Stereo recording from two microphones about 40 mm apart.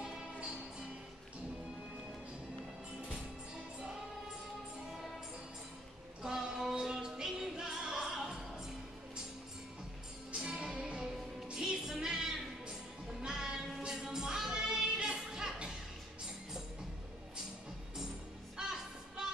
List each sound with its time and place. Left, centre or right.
6.2 s music: centre
10.3 s music: centre
11.5 s music: centre
18.6 s music: centre